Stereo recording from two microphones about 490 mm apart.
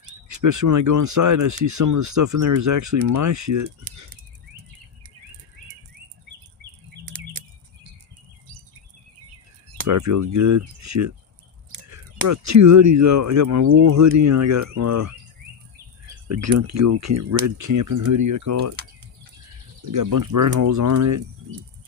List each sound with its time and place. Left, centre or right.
0.3 s speech: right
9.7 s speech: right
16.3 s speech: right
19.9 s speech: right